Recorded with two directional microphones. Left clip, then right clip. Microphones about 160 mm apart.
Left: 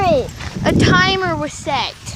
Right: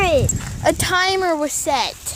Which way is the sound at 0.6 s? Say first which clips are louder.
Left 3 dB; 30° right (ahead or behind).